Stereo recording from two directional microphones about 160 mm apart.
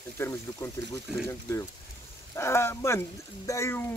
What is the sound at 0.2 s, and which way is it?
Speech, 15° left (ahead or behind).